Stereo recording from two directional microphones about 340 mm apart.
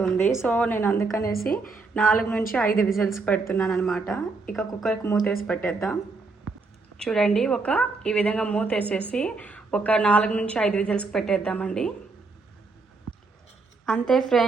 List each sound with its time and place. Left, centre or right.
0.0 s a woman's voice: centre
1.2 s a woman's voice: left
1.5 s speech: centre
13.8 s speech: centre